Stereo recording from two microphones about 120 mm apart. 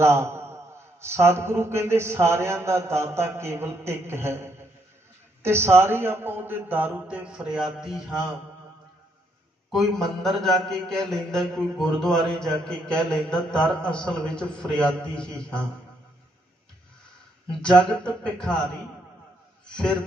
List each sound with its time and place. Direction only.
0.0 s a sound: 20° right (ahead or behind)
1.0 s a man's voice: 20° right (ahead or behind); by 8.1 s 5° right (ahead or behind)
9.7 s a man's voice: 5° left (ahead or behind)
17.6 s speech: 5° left (ahead or behind)
19.6 s speech: 5° left (ahead or behind)